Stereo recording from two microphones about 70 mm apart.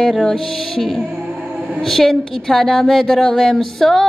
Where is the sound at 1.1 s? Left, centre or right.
Centre.